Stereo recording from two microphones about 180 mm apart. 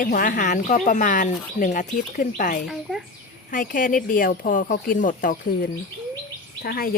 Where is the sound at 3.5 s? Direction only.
50° left (ahead or behind).